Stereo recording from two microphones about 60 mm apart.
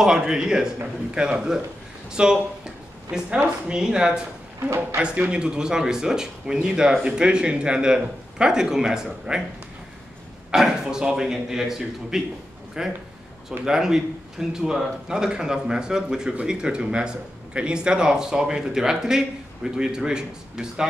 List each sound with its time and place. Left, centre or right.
0.0 s a man's voice: centre
2.0 s a sound: centre
3.3 s a man's voice: centre
4.6 s speech: right
5.0 s a man's voice: centre
10.5 s a man's voice: centre